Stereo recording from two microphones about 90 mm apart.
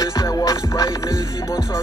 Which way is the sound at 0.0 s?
40° left (ahead or behind).